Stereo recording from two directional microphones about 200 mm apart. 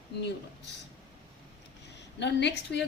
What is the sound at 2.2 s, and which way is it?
Speech, 60° left (ahead or behind).